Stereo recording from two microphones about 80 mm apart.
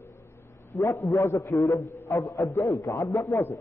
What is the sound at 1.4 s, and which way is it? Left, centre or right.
A man's voice, left.